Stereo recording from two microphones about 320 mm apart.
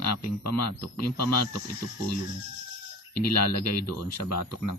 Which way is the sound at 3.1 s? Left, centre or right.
Left.